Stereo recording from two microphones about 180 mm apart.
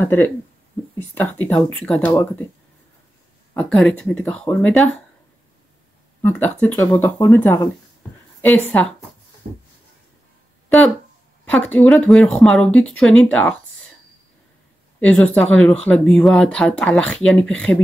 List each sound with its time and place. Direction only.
0.0 s speech: 15° left (ahead or behind)
3.5 s speech: 5° left (ahead or behind)
6.2 s a woman's voice: 10° left (ahead or behind)
11.4 s speech: 5° left (ahead or behind)
15.0 s speech: 5° left (ahead or behind)